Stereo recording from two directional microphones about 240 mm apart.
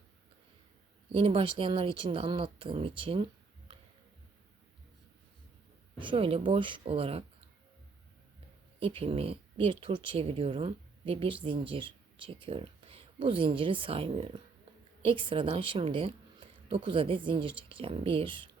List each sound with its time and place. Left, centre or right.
1.1 s speech: right
6.0 s speech: right
8.8 s a woman's voice: right